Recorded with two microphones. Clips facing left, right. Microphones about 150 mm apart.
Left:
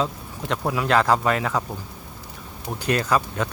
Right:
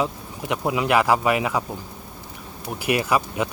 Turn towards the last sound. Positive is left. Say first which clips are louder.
# right 1 dB
turn(degrees=-15)  # may be behind; listen again after turning